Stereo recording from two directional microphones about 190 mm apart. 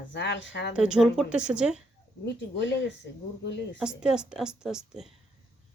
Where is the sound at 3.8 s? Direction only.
5° right (ahead or behind).